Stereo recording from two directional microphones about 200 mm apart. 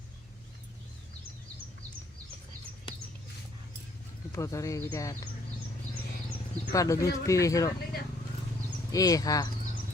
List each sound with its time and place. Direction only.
4.3 s speech: 15° left (ahead or behind)
6.7 s speech: 15° left (ahead or behind)
8.9 s speech: 15° left (ahead or behind)